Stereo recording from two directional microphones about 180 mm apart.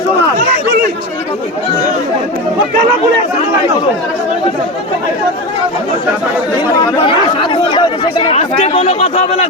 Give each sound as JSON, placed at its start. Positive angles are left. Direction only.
{"t": 7.0, "sound": "speech", "side_deg": 30}